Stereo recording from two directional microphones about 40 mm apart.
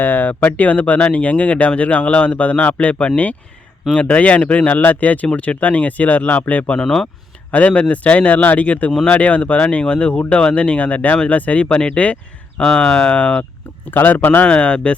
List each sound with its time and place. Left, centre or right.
0.0 s speech: left
4.8 s speech: left
6.8 s speech: centre
7.5 s speech: left
13.9 s speech: left
14.4 s speech: left